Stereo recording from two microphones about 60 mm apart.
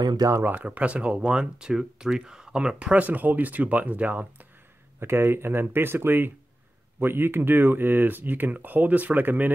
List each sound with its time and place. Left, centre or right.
0.4 s speech: right
0.7 s speech: right
5.0 s speech: right